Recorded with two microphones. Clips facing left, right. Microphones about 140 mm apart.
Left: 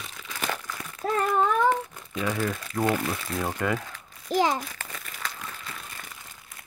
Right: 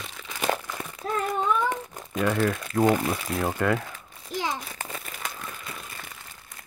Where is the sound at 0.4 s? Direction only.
35° right (ahead or behind).